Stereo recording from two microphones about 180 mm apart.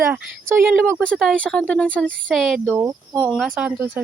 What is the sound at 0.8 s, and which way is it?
Speech, 5° left (ahead or behind).